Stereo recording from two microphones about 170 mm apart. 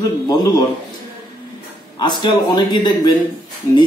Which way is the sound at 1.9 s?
25° left (ahead or behind).